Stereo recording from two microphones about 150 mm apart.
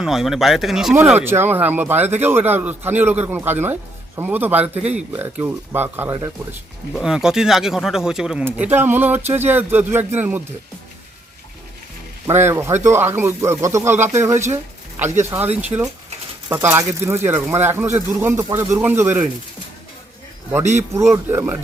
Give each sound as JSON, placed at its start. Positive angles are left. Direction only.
{"t": 0.0, "sound": "speech", "side_deg": 0}
{"t": 0.9, "sound": "speech", "side_deg": -10}
{"t": 12.3, "sound": "speech", "side_deg": -15}
{"t": 15.7, "sound": "speech", "side_deg": -30}
{"t": 16.5, "sound": "speech", "side_deg": -15}
{"t": 20.7, "sound": "speech", "side_deg": -20}